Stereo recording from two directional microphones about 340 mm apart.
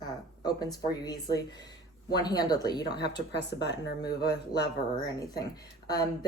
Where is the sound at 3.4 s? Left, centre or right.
Left.